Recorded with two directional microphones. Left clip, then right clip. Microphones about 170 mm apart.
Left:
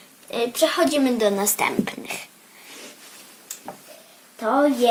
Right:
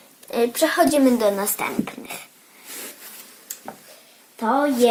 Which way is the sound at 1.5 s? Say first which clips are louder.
Left 3 dB; 15° left (ahead or behind).